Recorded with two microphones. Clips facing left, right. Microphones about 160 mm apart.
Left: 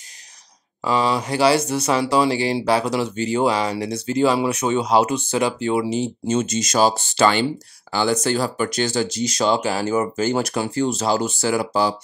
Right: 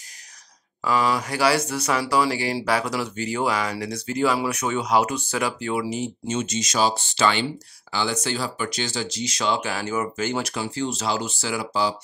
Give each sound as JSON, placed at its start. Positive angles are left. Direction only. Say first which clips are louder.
{"t": 0.8, "sound": "speech", "louder": "left 2 dB", "side_deg": 25}